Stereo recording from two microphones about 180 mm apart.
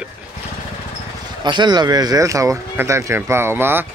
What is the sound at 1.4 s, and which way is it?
Speech, 25° right (ahead or behind).